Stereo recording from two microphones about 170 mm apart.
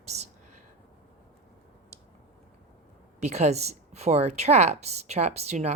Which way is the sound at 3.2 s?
40° right (ahead or behind).